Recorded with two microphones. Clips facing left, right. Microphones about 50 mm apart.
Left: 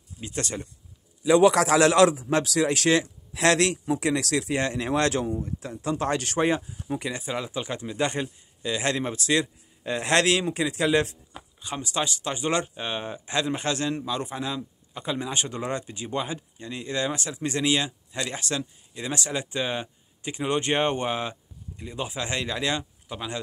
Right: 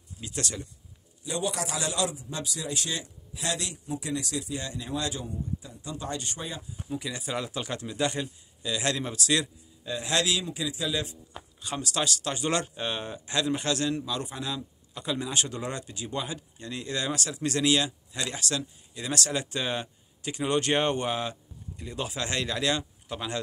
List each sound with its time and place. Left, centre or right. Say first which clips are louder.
0.2 s speech: left 3 dB; left
1.2 s a man's voice: left 13 dB; left
7.1 s speech: left 2 dB; left
7.3 s speech: left 2 dB; centre
8.0 s speech: left 2 dB; left
9.8 s a man's voice: left 6 dB; left
11.6 s speech: left 1 dB; centre
23.0 s speech: even; centre